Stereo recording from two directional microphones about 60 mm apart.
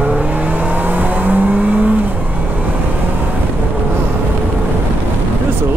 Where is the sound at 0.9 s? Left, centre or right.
Right.